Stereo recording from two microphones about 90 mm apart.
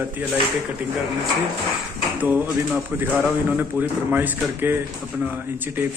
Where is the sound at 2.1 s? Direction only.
20° right (ahead or behind).